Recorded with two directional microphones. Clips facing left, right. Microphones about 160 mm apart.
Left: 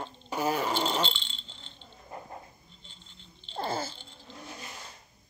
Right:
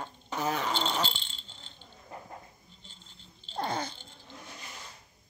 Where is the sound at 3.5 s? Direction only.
5° left (ahead or behind).